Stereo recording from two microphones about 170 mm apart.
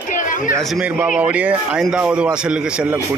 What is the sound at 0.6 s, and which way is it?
Speech, 5° right (ahead or behind).